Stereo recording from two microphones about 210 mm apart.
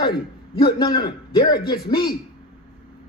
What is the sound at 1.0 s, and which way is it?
Speech, 20° left (ahead or behind).